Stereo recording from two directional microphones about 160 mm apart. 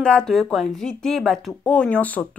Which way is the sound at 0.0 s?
5° left (ahead or behind).